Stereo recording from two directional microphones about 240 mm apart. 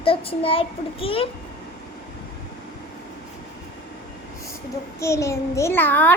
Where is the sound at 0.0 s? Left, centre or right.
Left.